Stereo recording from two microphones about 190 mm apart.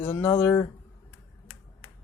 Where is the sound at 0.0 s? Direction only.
10° left (ahead or behind).